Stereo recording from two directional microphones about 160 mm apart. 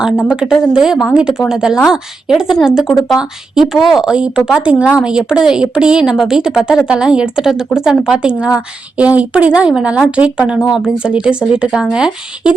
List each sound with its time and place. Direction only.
0.3 s a woman's voice: 5° right (ahead or behind)